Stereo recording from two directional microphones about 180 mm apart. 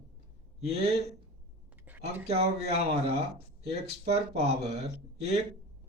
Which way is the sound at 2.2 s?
35° right (ahead or behind).